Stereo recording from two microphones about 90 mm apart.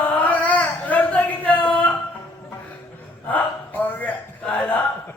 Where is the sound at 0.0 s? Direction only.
20° left (ahead or behind).